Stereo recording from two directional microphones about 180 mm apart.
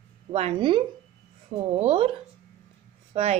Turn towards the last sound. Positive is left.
turn(degrees=-35)  # may be behind; listen again after turning